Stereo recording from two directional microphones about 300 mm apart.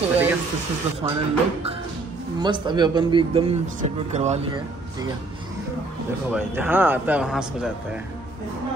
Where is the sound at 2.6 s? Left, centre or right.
Centre.